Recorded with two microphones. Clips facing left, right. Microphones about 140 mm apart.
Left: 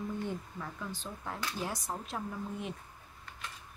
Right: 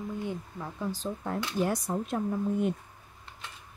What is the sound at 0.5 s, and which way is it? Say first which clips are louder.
Speech: right 6 dB; 25° right (ahead or behind).